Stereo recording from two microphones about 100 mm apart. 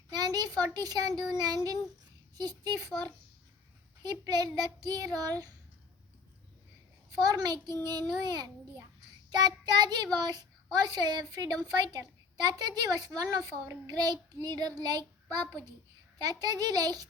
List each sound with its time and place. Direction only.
0.2 s a woman's voice: 40° right (ahead or behind)
7.1 s a woman's voice: 40° right (ahead or behind)
9.3 s child singing: 45° right (ahead or behind)
10.2 s a woman's voice: 45° right (ahead or behind)